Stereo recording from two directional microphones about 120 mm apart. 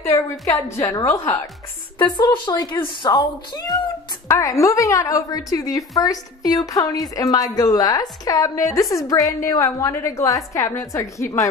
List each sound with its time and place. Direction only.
0.1 s a woman's voice: 25° left (ahead or behind)
2.0 s a woman's voice: 40° left (ahead or behind)